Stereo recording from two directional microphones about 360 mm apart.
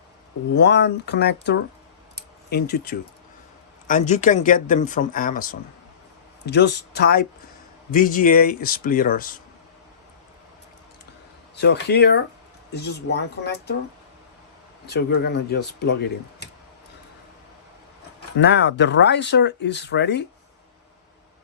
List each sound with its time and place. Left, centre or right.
0.5 s speech: left
2.1 s a sound: left
3.8 s speech: centre
11.5 s speech: left
14.8 s speech: left
18.3 s speech: left